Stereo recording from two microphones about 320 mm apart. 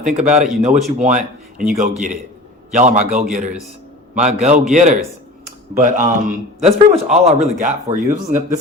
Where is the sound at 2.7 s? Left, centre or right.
Right.